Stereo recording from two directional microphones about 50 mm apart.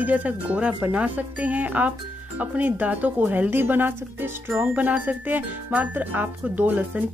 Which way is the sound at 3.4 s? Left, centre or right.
Right.